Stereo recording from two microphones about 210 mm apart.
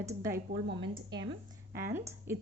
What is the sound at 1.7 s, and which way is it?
Speech, 10° right (ahead or behind).